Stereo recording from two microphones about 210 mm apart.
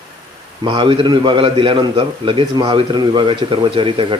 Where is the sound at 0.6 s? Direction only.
20° right (ahead or behind).